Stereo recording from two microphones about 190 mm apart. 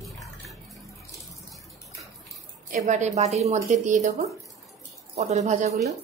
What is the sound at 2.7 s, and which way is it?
A woman's voice, 40° right (ahead or behind).